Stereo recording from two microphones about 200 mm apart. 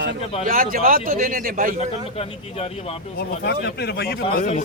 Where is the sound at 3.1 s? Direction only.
55° left (ahead or behind).